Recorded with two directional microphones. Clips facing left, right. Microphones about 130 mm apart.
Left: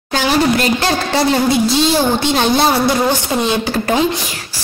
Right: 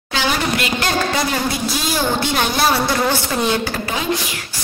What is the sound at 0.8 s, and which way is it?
A woman's voice, 30° left (ahead or behind).